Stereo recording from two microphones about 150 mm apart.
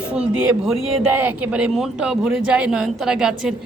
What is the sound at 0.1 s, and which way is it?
A man's voice, 5° right (ahead or behind).